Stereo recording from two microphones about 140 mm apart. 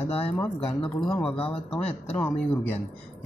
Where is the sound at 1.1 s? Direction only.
10° left (ahead or behind).